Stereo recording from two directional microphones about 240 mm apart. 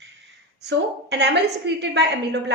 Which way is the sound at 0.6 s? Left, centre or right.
Right.